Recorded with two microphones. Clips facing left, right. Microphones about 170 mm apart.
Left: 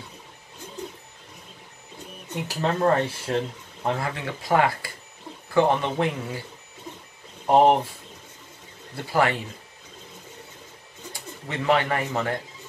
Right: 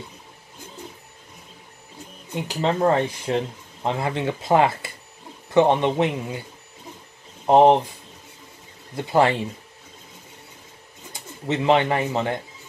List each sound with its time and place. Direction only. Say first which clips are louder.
2.4 s speech: right 2 dB; 20° right (ahead or behind)
7.4 s speech: right 3 dB; 20° right (ahead or behind)
8.9 s speech: right 4 dB; 25° right (ahead or behind)
11.4 s speech: right 4 dB; 25° right (ahead or behind)